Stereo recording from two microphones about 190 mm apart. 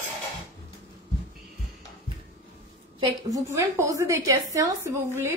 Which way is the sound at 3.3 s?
15° right (ahead or behind).